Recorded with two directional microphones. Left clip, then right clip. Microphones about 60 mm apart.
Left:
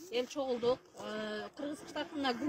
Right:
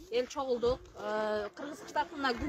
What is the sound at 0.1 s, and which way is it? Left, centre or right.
Speech, right.